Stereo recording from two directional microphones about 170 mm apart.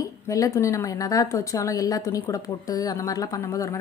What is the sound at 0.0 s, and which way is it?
A woman's voice, 20° left (ahead or behind).